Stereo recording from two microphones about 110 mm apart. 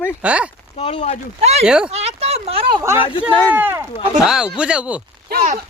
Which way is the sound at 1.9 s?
70° right (ahead or behind).